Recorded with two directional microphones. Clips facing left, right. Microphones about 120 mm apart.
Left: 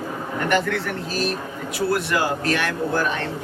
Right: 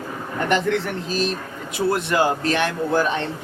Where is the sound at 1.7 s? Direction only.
25° right (ahead or behind).